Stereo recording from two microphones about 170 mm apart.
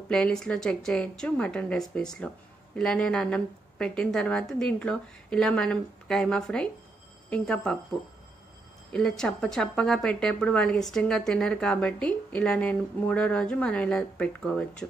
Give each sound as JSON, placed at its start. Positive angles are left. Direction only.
{"t": 0.1, "sound": "a woman's voice", "side_deg": 5}
{"t": 8.9, "sound": "a woman's voice", "side_deg": 5}